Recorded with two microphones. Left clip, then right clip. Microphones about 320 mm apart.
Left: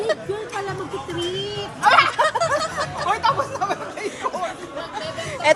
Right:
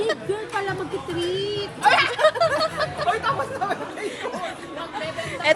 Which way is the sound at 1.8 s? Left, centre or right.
Left.